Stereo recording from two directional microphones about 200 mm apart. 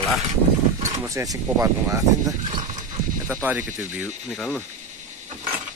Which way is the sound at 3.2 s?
10° right (ahead or behind).